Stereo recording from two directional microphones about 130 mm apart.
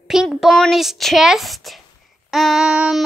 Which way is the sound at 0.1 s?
5° right (ahead or behind).